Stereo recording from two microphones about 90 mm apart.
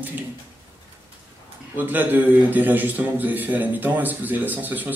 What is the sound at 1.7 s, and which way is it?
A man's voice, 20° right (ahead or behind).